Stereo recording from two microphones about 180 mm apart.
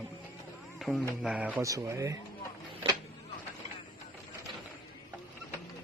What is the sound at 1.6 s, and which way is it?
Speech, 15° right (ahead or behind).